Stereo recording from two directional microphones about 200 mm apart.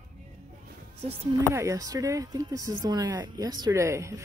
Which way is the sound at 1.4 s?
15° right (ahead or behind).